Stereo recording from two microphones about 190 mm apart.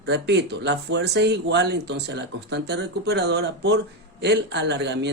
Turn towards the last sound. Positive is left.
turn(degrees=-65)  # may be behind; listen again after turning